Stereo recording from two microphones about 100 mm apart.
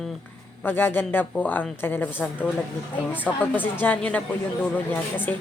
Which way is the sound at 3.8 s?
15° left (ahead or behind).